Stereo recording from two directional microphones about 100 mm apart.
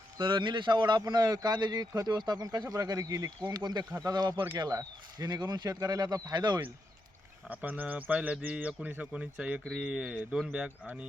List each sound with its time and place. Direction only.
0.2 s a man's voice: 55° right (ahead or behind)
7.4 s speech: 15° right (ahead or behind)